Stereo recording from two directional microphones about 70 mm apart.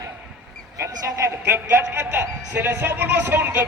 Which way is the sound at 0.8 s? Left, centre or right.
Right.